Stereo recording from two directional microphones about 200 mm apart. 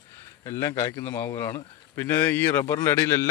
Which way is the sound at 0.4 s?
15° left (ahead or behind).